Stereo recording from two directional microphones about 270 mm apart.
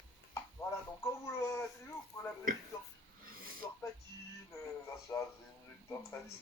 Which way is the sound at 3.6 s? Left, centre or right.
Centre.